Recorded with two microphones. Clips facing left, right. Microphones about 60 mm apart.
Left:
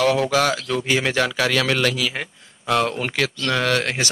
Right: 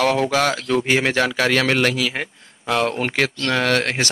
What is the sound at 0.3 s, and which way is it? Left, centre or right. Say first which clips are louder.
A man's voice: right 1 dB; right.